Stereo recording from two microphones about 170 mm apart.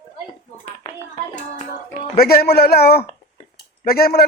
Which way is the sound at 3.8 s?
65° left (ahead or behind).